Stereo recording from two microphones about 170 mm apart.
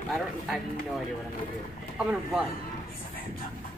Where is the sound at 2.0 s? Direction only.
5° right (ahead or behind).